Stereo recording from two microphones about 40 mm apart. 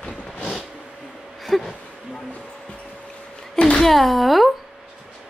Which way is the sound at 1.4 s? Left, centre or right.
Centre.